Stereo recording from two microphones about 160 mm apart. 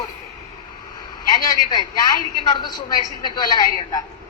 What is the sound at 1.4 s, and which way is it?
A woman's voice, 25° left (ahead or behind).